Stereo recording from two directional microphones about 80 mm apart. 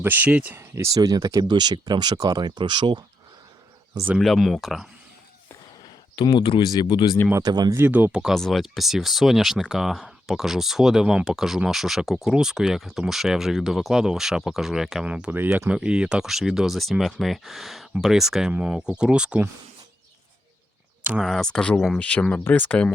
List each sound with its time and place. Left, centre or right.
0.0 s speech: right
0.9 s speech: right
4.2 s speech: centre
6.1 s speech: left
7.3 s speech: right
7.8 s speech: right
8.1 s speech: centre
15.0 s speech: centre
21.2 s speech: centre